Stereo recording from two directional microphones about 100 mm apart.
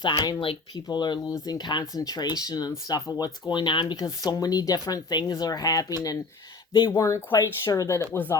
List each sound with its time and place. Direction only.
0.0 s speech: 45° left (ahead or behind); by 8.4 s 25° left (ahead or behind)